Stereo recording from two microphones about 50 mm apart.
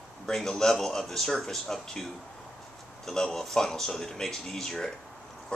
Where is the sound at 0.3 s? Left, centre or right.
Centre.